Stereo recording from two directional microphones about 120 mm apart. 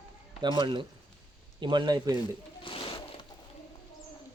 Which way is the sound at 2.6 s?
50° left (ahead or behind).